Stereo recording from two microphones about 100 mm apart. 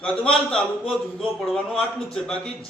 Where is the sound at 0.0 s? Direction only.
10° left (ahead or behind).